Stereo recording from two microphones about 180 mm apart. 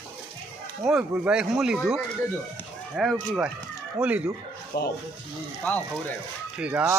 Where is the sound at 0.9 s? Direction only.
5° right (ahead or behind).